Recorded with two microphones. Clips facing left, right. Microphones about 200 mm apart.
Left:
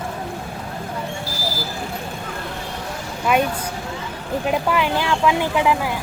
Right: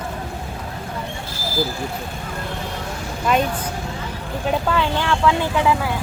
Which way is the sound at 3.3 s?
10° left (ahead or behind).